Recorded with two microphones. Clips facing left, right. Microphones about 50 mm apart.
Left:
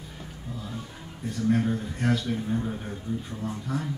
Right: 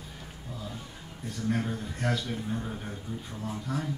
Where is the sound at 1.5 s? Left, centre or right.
Centre.